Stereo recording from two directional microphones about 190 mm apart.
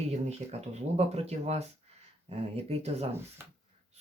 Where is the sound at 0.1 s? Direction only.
35° right (ahead or behind).